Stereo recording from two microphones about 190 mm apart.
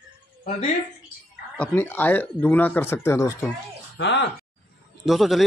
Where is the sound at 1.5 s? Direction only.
10° left (ahead or behind).